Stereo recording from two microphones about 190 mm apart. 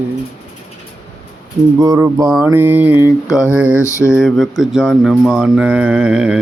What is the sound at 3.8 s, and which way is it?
Mantra, 15° left (ahead or behind).